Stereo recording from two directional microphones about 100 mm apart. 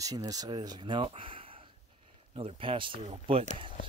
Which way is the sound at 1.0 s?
65° right (ahead or behind).